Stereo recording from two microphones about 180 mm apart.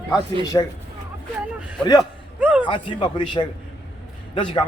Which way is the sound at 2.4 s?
10° right (ahead or behind).